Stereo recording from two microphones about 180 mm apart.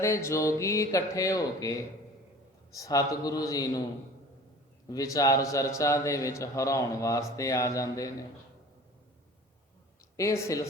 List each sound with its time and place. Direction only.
0.0 s a man's voice: 15° left (ahead or behind)
4.9 s a man's voice: 20° left (ahead or behind)
10.2 s a man's voice: 15° left (ahead or behind)